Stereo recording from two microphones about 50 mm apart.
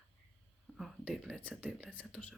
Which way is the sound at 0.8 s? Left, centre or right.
Centre.